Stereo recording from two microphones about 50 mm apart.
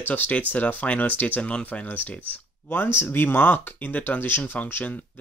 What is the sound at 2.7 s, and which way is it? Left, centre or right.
Speech, left.